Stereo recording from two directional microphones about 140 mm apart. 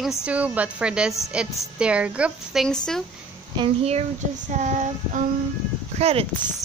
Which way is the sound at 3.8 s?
50° right (ahead or behind).